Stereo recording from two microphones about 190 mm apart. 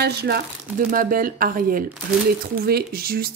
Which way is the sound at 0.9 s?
45° right (ahead or behind).